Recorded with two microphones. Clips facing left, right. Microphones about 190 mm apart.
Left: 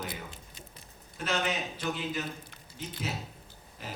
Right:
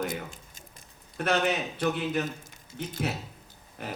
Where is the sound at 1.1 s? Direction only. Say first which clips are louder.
Right 5 dB; 60° right (ahead or behind).